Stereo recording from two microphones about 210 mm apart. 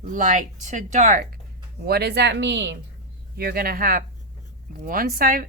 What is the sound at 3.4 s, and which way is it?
Speech, 45° right (ahead or behind).